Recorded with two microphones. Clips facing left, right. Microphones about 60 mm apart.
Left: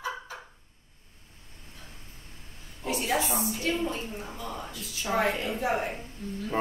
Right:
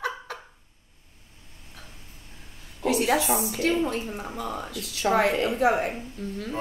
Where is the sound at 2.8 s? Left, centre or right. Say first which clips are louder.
Right 5 dB; right.